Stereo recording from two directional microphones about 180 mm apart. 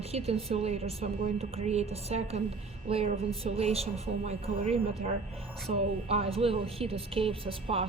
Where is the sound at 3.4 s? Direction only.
35° right (ahead or behind).